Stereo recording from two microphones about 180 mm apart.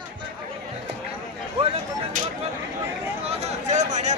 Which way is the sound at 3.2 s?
35° right (ahead or behind).